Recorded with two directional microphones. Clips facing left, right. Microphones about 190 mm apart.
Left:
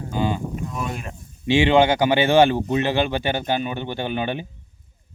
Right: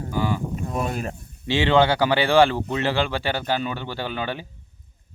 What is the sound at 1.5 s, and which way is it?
Speech, 15° left (ahead or behind).